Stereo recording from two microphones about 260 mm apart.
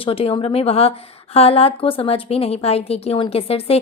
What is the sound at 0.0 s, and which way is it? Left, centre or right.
Speech, left.